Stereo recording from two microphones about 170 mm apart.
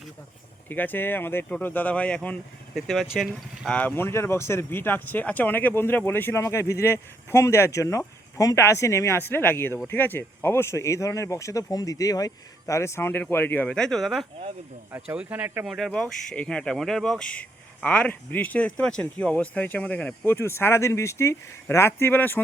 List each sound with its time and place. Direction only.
0.7 s speech: 10° left (ahead or behind)
3.8 s speech: 10° left (ahead or behind)
15.1 s speech: 10° right (ahead or behind)
15.6 s speech: centre (ahead or behind)